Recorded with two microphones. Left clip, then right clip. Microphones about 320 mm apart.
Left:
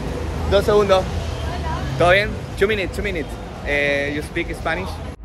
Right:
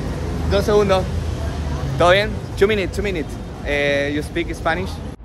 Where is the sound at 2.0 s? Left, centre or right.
Centre.